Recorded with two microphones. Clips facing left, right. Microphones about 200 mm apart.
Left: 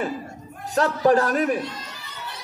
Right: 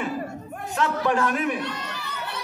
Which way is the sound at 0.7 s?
40° left (ahead or behind).